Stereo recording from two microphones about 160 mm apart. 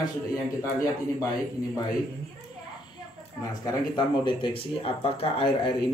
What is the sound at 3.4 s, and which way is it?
Speech, 25° left (ahead or behind).